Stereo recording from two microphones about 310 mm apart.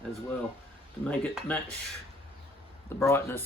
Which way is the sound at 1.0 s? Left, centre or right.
Centre.